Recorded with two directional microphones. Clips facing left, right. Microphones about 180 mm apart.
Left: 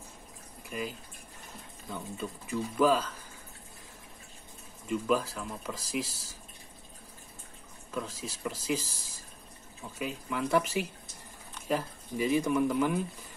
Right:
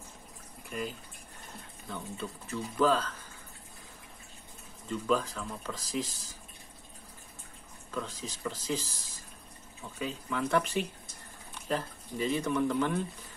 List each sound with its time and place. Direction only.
0.7 s speech: centre (ahead or behind)
4.8 s speech: 10° left (ahead or behind)
7.9 s speech: 10° left (ahead or behind)